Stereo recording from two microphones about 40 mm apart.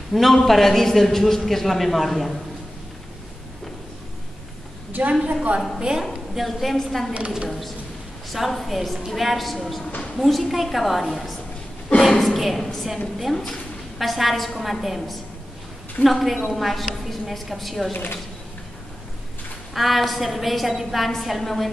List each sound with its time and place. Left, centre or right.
0.1 s a man's voice: centre
5.2 s a woman's voice: right
5.8 s a woman's voice: centre
6.3 s a woman's voice: centre
7.2 s a woman's voice: right
7.4 s a woman's voice: centre
13.9 s a woman's voice: centre
17.9 s speech: left
19.7 s a woman's voice: centre